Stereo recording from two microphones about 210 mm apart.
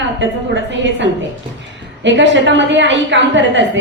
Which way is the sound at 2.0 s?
60° right (ahead or behind).